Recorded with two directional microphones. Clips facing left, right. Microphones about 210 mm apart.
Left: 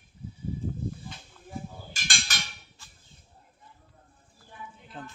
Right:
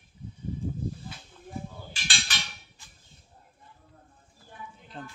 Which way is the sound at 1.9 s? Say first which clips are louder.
Even; 45° left (ahead or behind).